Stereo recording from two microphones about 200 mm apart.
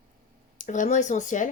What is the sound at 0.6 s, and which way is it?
Speech, 40° left (ahead or behind).